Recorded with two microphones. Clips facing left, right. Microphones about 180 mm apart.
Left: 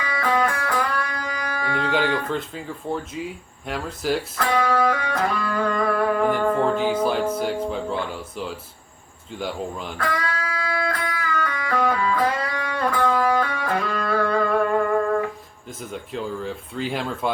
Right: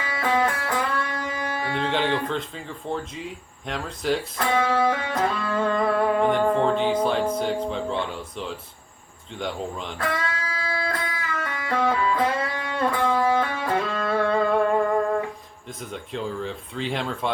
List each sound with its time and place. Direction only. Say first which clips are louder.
0.0 s music: left 1 dB; 25° right (ahead or behind)
2.0 s speech: left 1 dB; 25° right (ahead or behind)
2.3 s speech: left 2 dB; 5° left (ahead or behind)
4.4 s music: left 2 dB; 25° right (ahead or behind)
6.6 s speech: even; 5° left (ahead or behind)
10.0 s music: left 1 dB; 25° right (ahead or behind)
15.9 s speech: left 1 dB; 5° left (ahead or behind)